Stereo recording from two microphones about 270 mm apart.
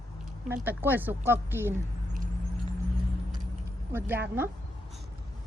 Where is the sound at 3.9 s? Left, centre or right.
Centre.